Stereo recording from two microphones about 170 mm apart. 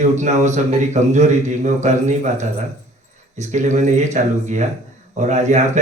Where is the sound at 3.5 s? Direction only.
45° right (ahead or behind).